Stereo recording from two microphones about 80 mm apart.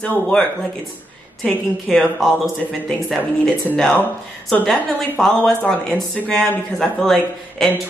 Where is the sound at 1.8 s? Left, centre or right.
Centre.